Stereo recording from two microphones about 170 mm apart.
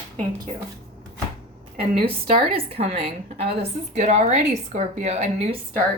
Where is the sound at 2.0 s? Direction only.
35° right (ahead or behind).